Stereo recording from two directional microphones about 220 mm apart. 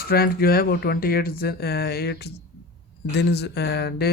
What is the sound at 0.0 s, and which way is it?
Speech, 45° left (ahead or behind).